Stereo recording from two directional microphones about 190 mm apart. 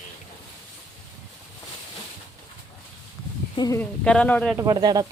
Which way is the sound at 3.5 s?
20° left (ahead or behind).